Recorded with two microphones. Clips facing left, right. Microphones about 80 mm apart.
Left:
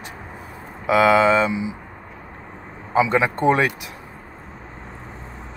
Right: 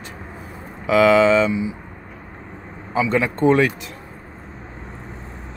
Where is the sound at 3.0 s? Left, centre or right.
Centre.